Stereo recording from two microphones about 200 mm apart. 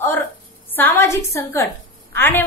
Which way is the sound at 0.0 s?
10° left (ahead or behind).